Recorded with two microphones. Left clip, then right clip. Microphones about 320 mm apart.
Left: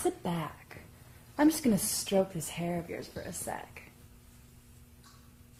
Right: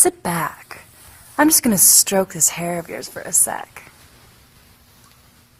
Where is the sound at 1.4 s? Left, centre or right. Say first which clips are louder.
Right 11 dB; right.